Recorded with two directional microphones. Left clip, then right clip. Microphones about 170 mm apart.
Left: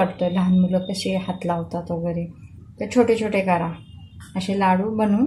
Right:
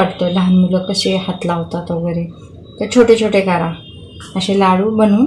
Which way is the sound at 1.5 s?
20° right (ahead or behind).